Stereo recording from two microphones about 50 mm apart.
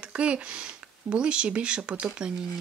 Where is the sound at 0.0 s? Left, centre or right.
Right.